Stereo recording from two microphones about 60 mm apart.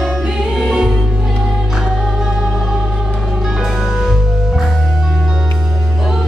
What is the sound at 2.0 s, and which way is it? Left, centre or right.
Music, centre.